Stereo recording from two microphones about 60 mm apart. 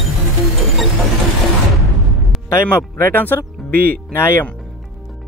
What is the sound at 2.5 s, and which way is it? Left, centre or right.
Speech, left.